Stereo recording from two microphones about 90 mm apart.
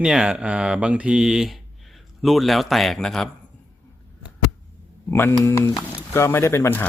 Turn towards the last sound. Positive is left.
turn(degrees=25)  # may be behind; listen again after turning